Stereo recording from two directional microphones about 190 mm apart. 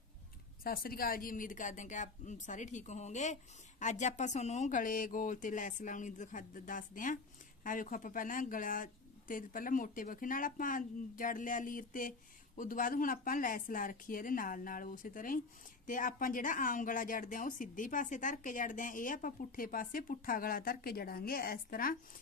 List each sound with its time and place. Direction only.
0.6 s speech: 50° left (ahead or behind)